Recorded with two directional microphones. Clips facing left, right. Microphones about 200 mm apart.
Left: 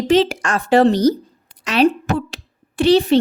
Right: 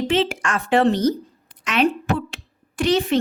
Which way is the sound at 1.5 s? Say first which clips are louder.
Left 5 dB; 35° left (ahead or behind).